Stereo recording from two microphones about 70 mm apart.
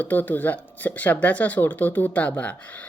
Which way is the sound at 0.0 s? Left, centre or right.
Left.